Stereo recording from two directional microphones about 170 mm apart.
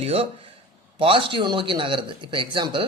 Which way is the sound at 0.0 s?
35° right (ahead or behind).